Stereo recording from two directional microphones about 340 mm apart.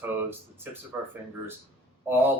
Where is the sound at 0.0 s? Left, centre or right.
Centre.